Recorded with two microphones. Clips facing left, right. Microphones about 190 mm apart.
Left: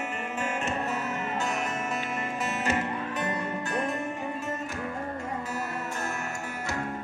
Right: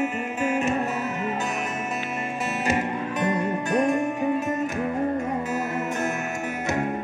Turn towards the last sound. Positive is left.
turn(degrees=-20)  # may be behind; listen again after turning